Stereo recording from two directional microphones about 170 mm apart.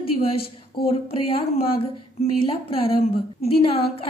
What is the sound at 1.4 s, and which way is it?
A woman's voice, 35° left (ahead or behind).